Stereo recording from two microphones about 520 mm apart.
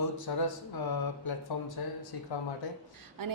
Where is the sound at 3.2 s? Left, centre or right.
Right.